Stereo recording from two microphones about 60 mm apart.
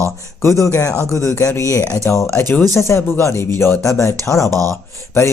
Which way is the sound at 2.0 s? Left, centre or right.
Left.